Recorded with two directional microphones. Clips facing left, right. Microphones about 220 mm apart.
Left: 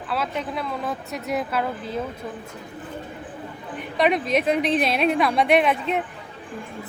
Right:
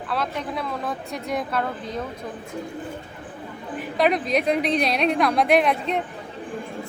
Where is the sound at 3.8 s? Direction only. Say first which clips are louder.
Even; centre (ahead or behind).